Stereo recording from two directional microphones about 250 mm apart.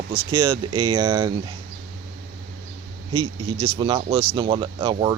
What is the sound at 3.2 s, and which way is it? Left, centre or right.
Speech, right.